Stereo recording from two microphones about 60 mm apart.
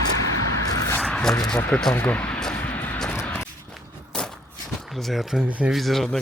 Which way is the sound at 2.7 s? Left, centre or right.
Left.